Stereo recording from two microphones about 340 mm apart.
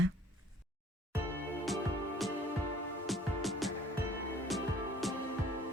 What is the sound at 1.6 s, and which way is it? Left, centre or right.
Music, centre.